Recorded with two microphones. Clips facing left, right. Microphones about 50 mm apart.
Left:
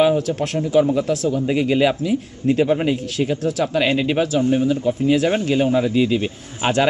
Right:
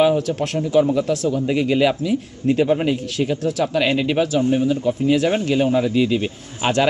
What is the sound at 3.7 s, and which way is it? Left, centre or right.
Speech, centre.